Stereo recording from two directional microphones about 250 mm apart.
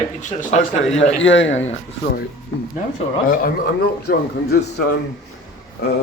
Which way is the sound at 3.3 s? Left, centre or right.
Left.